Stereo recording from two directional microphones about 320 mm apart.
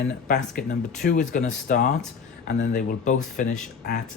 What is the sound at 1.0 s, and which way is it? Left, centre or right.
Speech, left.